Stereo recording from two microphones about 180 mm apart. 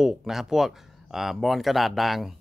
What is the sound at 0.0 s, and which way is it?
Speech, centre (ahead or behind).